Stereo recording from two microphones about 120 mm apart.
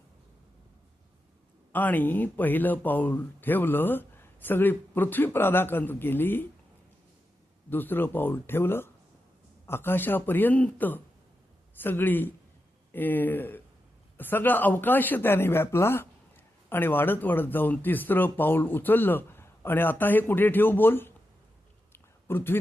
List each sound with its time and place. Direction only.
1.7 s speech: 15° left (ahead or behind)
7.7 s speech: 15° left (ahead or behind)
21.9 s a sound: 20° left (ahead or behind)